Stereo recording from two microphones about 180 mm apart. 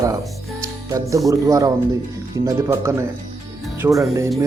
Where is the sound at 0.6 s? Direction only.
15° right (ahead or behind).